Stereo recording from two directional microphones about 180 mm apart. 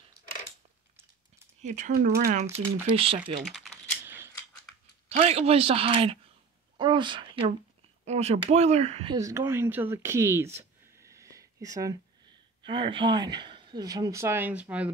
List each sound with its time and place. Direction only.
1.6 s speech: 40° right (ahead or behind)
2.9 s speech: 30° right (ahead or behind)
3.4 s typing: centre (ahead or behind)
4.0 s a sound: 10° right (ahead or behind)
5.1 s speech: 35° right (ahead or behind)
9.1 s speech: 15° right (ahead or behind)